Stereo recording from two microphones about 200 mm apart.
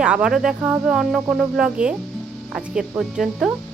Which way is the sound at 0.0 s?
5° right (ahead or behind).